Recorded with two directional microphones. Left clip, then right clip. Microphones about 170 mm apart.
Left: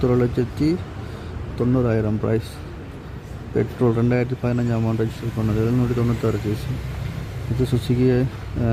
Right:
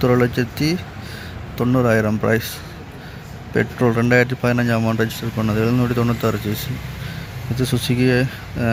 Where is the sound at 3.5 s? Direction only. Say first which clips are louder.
Right 2 dB; centre (ahead or behind).